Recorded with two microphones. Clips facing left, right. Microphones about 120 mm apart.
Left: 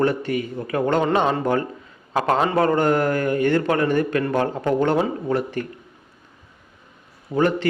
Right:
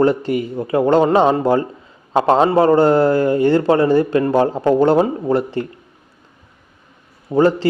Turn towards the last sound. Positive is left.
turn(degrees=-30)  # may be behind; listen again after turning